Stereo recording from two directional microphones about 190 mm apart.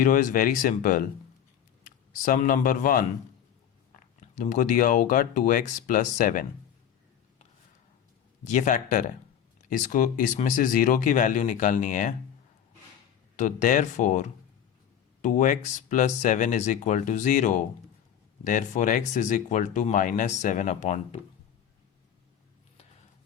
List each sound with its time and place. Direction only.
0.0 s speech: 45° left (ahead or behind)
2.2 s speech: 45° left (ahead or behind)
4.4 s speech: 45° left (ahead or behind)
8.4 s speech: 40° left (ahead or behind)
13.3 s speech: 40° left (ahead or behind)